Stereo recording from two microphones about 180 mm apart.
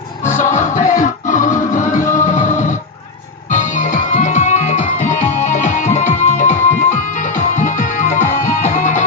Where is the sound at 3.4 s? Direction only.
45° left (ahead or behind).